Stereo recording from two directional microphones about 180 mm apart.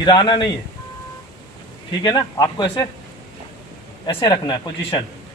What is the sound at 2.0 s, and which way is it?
Speech, 25° left (ahead or behind).